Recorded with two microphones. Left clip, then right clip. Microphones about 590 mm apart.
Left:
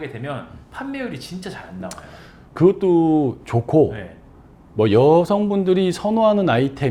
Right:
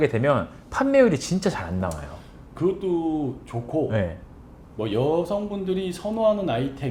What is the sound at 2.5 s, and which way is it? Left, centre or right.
Speech, left.